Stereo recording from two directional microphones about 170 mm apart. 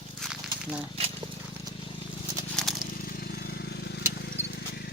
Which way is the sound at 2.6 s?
Centre (ahead or behind).